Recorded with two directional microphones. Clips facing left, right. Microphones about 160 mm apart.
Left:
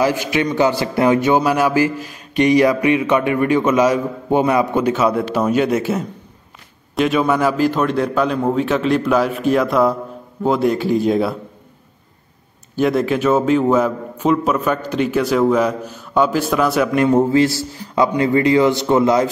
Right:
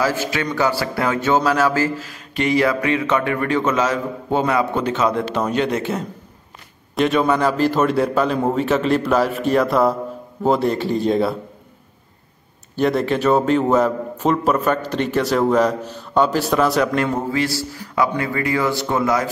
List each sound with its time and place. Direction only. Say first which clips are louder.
0.0 s a man's voice: left 4 dB; 15° left (ahead or behind); by 11.3 s centre (ahead or behind)
12.7 s a man's voice: left 2 dB; centre (ahead or behind)
16.9 s a man's voice: left 7 dB; 20° left (ahead or behind)